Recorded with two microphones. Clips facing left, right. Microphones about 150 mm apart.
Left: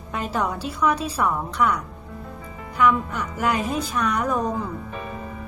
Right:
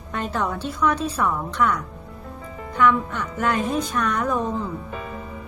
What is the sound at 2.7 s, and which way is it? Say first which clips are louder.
Speech: right 1 dB; 10° left (ahead or behind).